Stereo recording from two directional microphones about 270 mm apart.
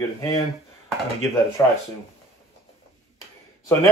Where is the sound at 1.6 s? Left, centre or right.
Centre.